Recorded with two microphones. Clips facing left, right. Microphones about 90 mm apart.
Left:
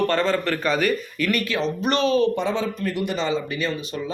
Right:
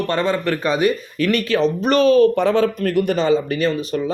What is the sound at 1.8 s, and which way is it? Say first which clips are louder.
Speech: right 6 dB; 40° right (ahead or behind).